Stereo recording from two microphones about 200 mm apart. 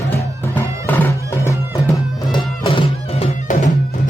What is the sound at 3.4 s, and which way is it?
Music, 35° left (ahead or behind).